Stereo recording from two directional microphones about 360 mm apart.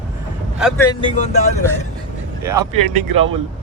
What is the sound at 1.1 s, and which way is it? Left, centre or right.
Speech, centre.